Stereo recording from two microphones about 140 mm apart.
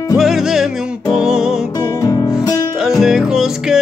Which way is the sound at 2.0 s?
25° left (ahead or behind).